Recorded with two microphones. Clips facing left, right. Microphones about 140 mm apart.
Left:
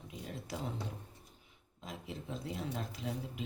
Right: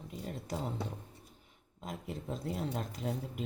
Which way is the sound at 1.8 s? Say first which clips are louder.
Right 3 dB; 50° right (ahead or behind).